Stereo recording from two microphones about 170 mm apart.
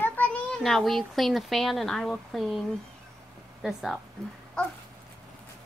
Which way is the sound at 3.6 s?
Centre (ahead or behind).